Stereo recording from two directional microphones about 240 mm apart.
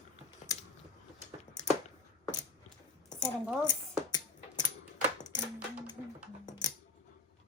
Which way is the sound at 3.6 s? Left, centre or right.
Centre.